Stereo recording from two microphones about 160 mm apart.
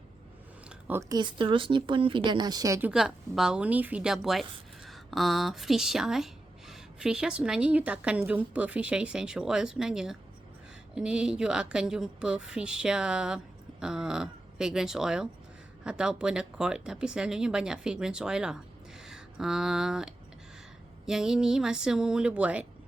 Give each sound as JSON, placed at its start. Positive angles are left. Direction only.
{"t": 0.9, "sound": "speech", "side_deg": -15}
{"t": 1.2, "sound": "speech", "side_deg": -30}
{"t": 2.9, "sound": "speech", "side_deg": -5}